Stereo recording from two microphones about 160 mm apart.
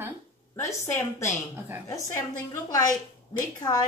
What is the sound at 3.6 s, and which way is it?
Speech, 25° left (ahead or behind).